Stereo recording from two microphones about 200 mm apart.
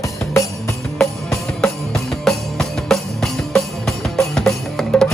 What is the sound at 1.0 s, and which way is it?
Music, centre (ahead or behind).